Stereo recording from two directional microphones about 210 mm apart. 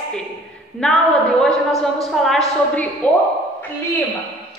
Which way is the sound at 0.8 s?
5° left (ahead or behind).